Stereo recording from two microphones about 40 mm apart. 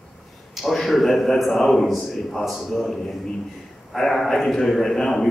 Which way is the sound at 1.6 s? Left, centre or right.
Centre.